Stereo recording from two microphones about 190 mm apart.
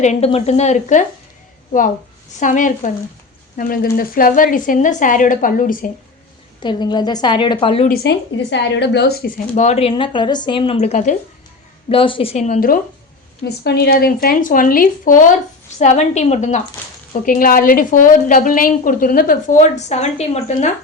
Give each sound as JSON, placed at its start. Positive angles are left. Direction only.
{"t": 0.0, "sound": "a woman's voice", "side_deg": 35}
{"t": 2.4, "sound": "a woman's voice", "side_deg": 40}
{"t": 6.6, "sound": "speech", "side_deg": 25}
{"t": 7.9, "sound": "a woman's voice", "side_deg": 65}
{"t": 9.6, "sound": "speech", "side_deg": 35}
{"t": 11.9, "sound": "a woman's voice", "side_deg": 30}